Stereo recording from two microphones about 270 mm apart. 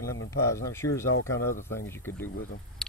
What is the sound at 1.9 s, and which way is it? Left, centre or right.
Speech, centre.